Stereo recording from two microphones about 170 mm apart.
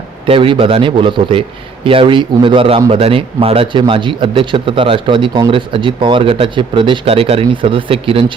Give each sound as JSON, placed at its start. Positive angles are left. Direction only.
{"t": 0.3, "sound": "a man's voice", "side_deg": -30}